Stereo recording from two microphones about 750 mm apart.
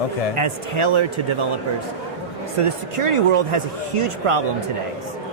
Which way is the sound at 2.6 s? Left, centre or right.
Right.